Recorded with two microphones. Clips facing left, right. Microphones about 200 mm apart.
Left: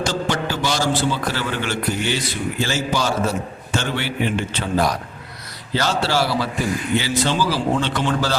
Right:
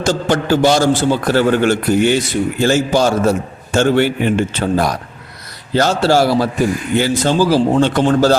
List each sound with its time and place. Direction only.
0.0 s a man's voice: 50° right (ahead or behind)